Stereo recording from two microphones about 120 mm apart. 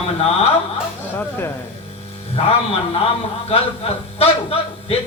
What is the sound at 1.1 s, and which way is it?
Speech, 15° left (ahead or behind).